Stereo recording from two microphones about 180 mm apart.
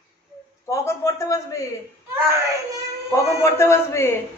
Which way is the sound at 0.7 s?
15° left (ahead or behind).